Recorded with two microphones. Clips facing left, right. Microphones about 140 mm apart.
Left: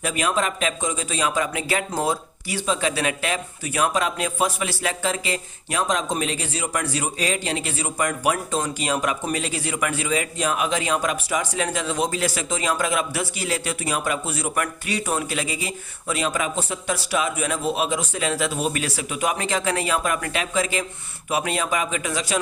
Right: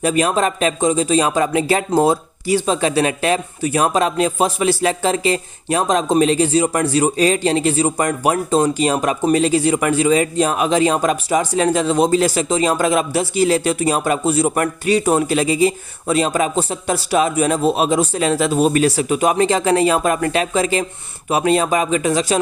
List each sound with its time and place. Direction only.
0.0 s speech: 35° right (ahead or behind)